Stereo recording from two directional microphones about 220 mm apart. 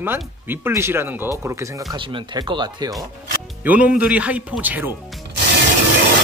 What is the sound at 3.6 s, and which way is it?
Speech, 10° right (ahead or behind).